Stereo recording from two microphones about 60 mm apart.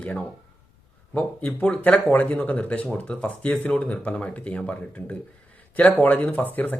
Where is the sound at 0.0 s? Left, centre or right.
Left.